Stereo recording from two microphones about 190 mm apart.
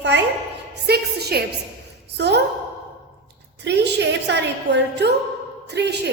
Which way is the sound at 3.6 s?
65° right (ahead or behind).